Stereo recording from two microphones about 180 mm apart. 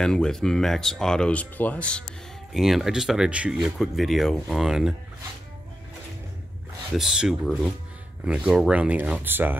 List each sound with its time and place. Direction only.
0.0 s speech: 5° left (ahead or behind)
7.0 s speech: centre (ahead or behind)